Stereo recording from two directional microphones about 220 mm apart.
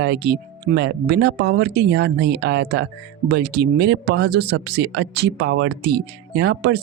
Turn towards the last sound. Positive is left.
turn(degrees=-50)  # may be behind; listen again after turning